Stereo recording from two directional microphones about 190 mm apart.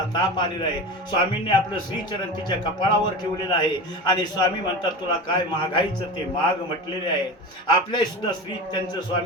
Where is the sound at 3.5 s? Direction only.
20° left (ahead or behind).